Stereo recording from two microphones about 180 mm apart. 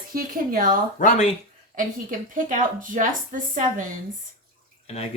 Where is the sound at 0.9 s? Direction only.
45° left (ahead or behind).